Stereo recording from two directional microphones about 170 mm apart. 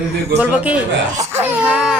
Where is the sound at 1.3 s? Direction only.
10° right (ahead or behind).